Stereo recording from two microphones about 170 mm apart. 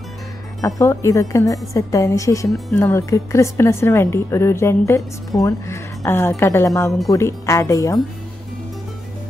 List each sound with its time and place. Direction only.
0.6 s a woman's voice: 20° left (ahead or behind)